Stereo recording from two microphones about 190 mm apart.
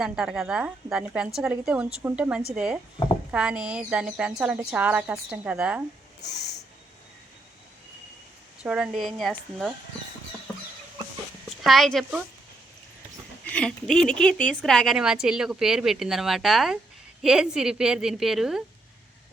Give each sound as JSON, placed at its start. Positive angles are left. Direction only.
{"t": 0.0, "sound": "speech", "side_deg": -5}
{"t": 6.2, "sound": "snort", "side_deg": 60}
{"t": 8.6, "sound": "speech", "side_deg": -5}
{"t": 11.4, "sound": "a woman's voice", "side_deg": 0}
{"t": 13.4, "sound": "speech", "side_deg": 5}